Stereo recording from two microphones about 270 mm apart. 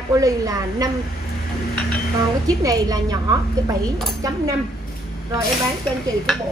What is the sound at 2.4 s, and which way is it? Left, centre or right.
Speech, centre.